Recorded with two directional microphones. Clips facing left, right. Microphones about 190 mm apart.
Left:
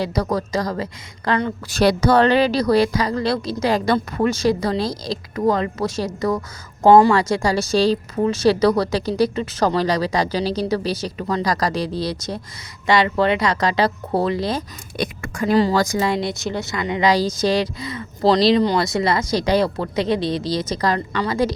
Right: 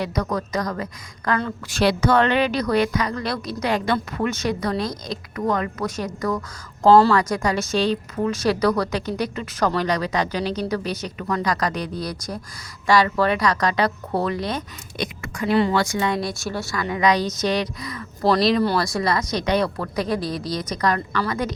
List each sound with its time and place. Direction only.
0.0 s speech: 30° left (ahead or behind)
1.7 s speech: 40° left (ahead or behind)
14.9 s speech: 50° left (ahead or behind); by 21.5 s 30° left (ahead or behind)